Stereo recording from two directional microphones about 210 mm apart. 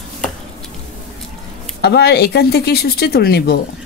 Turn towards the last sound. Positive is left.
turn(degrees=50)  # may be behind; listen again after turning